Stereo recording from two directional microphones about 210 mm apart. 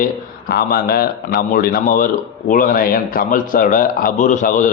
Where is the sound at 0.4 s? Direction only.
45° left (ahead or behind).